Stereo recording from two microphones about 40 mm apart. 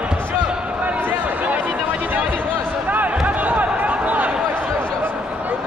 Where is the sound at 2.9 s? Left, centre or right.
Right.